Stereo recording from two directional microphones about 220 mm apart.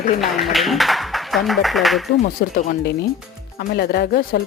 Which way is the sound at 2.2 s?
40° left (ahead or behind).